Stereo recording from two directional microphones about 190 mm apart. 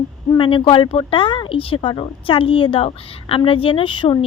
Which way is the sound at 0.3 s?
25° left (ahead or behind).